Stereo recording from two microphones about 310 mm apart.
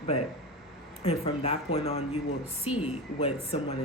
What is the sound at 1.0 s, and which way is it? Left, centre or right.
Speech, centre.